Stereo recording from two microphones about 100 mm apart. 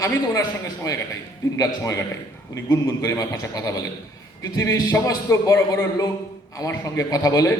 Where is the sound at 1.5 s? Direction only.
35° left (ahead or behind).